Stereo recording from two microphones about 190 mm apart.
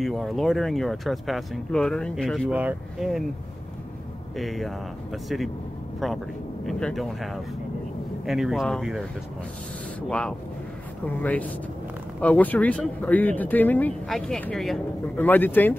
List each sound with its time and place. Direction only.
0.0 s speech: centre (ahead or behind)
4.4 s speech: centre (ahead or behind)
6.6 s speech: centre (ahead or behind)
8.3 s speech: centre (ahead or behind)
10.0 s speech: 5° left (ahead or behind)